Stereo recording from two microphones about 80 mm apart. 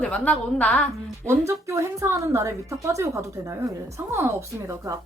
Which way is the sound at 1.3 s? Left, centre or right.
Right.